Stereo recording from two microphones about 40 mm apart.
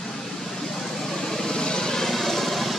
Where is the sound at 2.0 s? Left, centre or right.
Centre.